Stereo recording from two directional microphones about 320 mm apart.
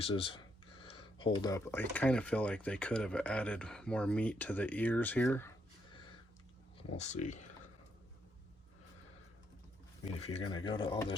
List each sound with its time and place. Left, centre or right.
0.0 s speech: centre
6.9 s speech: left
10.2 s speech: centre